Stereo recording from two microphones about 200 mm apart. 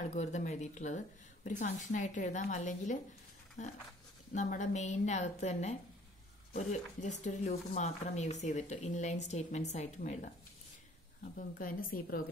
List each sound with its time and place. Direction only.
0.1 s speech: 35° left (ahead or behind)
11.3 s a woman's voice: 45° left (ahead or behind)